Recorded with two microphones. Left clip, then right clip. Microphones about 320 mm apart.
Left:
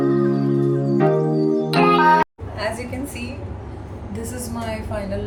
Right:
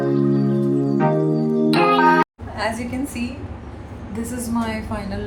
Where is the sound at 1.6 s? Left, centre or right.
Centre.